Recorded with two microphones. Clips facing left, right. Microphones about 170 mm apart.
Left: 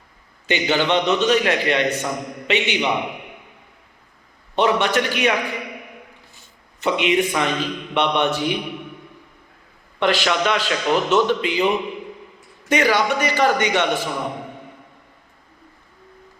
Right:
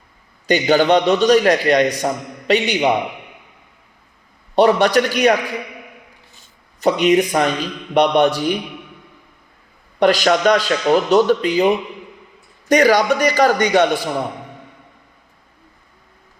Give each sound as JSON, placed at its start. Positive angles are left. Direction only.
{"t": 0.4, "sound": "a man's voice", "side_deg": -40}
{"t": 4.5, "sound": "a man's voice", "side_deg": -40}
{"t": 6.7, "sound": "a man's voice", "side_deg": -40}
{"t": 10.0, "sound": "a man's voice", "side_deg": -40}